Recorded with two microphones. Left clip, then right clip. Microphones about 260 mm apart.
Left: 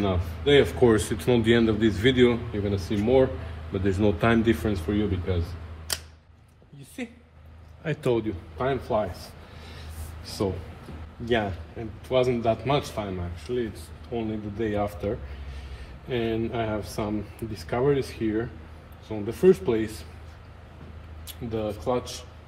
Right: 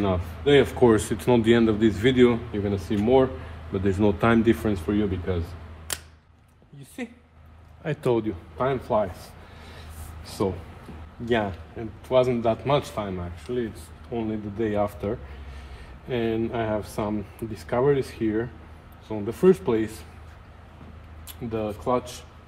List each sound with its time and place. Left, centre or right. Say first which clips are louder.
0.0 s speech: right 2 dB; right
7.8 s a man's voice: right 1 dB; right
10.4 s a man's voice: right 2 dB; right
21.3 s speech: right 1 dB; right